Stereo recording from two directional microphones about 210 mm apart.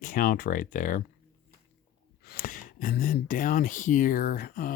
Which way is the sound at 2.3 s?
45° left (ahead or behind).